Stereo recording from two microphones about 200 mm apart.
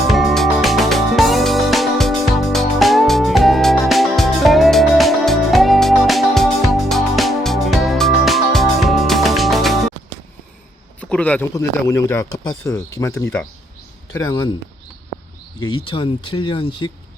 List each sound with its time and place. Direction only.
0.1 s music: centre (ahead or behind)
11.0 s speech: 5° left (ahead or behind)
15.6 s speech: 25° left (ahead or behind)